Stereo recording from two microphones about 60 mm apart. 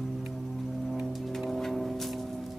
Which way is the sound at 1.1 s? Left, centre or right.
Centre.